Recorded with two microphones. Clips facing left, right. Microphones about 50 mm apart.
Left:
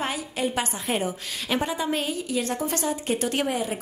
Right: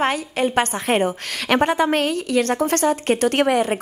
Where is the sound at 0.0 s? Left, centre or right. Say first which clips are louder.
Right 7 dB; right.